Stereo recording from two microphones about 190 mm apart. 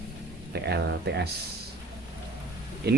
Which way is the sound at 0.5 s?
60° right (ahead or behind).